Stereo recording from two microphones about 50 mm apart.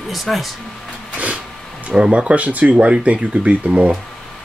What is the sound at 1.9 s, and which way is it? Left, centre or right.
Speech, centre.